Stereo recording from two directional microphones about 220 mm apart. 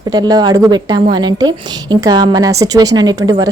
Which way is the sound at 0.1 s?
20° right (ahead or behind).